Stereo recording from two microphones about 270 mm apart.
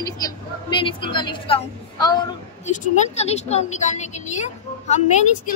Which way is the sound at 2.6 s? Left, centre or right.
Left.